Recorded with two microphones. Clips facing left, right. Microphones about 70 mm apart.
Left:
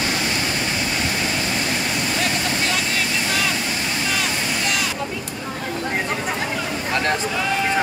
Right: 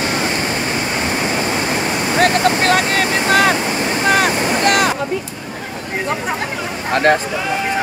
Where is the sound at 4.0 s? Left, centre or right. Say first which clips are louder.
Right 12 dB; right.